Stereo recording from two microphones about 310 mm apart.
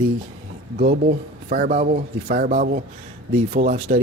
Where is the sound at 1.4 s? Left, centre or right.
Right.